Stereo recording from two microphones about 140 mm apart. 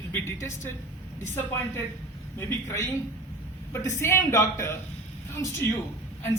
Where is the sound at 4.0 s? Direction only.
20° left (ahead or behind).